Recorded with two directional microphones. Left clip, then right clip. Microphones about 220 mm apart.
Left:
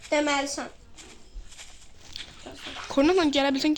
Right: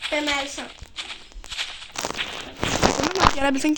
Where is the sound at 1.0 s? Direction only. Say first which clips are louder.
Right 17 dB; 35° right (ahead or behind).